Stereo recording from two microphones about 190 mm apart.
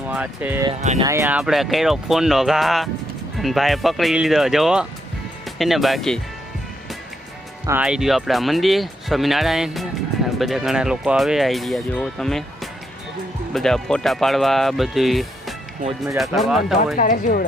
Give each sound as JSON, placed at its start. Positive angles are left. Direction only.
{"t": 0.1, "sound": "speech", "side_deg": -10}
{"t": 0.8, "sound": "speech", "side_deg": -35}
{"t": 1.0, "sound": "speech", "side_deg": -15}
{"t": 7.7, "sound": "speech", "side_deg": -5}
{"t": 13.5, "sound": "speech", "side_deg": 0}
{"t": 17.0, "sound": "speech", "side_deg": 45}